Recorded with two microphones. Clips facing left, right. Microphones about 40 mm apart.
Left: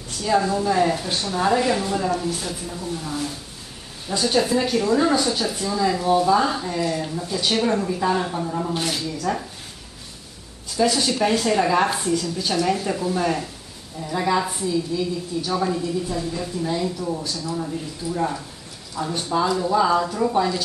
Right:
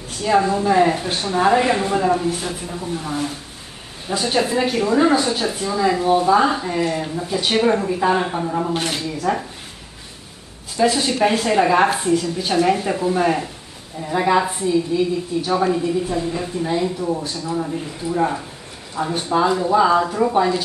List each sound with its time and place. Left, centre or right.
0.2 s speech: right
10.8 s speech: right